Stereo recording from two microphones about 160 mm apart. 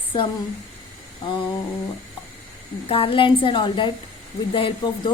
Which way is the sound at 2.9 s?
35° left (ahead or behind).